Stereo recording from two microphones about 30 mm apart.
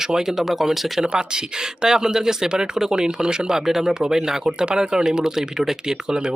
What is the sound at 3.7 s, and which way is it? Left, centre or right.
Speech, centre.